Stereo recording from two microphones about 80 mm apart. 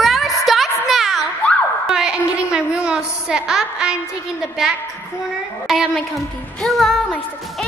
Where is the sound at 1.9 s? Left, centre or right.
Centre.